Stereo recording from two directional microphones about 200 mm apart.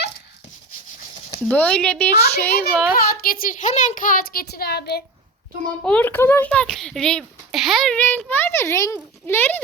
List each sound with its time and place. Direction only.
1.5 s speech: 5° left (ahead or behind)
2.9 s a woman's voice: 50° left (ahead or behind)
5.8 s a child's voice: 5° left (ahead or behind)